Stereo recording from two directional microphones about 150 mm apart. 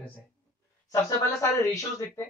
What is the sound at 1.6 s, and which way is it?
Speech, 20° left (ahead or behind).